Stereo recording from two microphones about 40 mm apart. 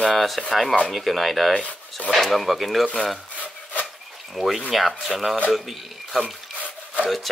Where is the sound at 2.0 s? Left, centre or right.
Left.